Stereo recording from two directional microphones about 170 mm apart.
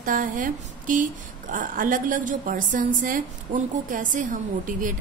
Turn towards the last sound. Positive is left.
turn(degrees=-50)  # may be behind; listen again after turning